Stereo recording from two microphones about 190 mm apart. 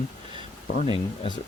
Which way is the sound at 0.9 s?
25° left (ahead or behind).